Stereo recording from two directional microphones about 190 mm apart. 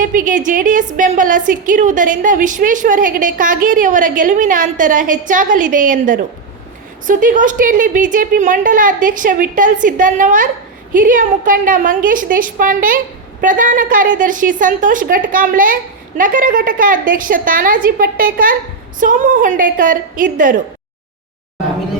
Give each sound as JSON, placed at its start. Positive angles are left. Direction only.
{"t": 0.0, "sound": "a woman's voice", "side_deg": -45}